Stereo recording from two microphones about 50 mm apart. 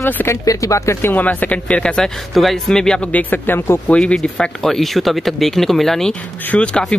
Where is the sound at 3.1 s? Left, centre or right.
Left.